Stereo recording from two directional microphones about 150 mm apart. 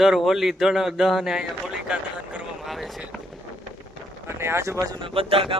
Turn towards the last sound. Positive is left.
turn(degrees=-35)  # may be behind; listen again after turning